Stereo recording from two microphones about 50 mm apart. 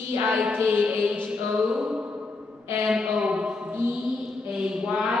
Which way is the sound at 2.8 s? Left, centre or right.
Centre.